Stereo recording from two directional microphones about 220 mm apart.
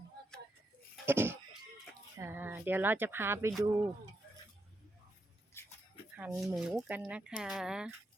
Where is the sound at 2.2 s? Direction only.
10° right (ahead or behind).